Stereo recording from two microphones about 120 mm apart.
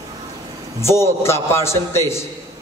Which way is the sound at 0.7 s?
20° left (ahead or behind).